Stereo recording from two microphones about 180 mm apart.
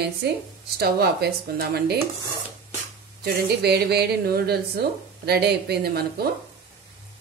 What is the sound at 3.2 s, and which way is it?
A woman's voice, 65° right (ahead or behind).